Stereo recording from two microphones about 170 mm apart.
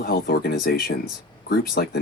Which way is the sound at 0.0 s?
60° left (ahead or behind).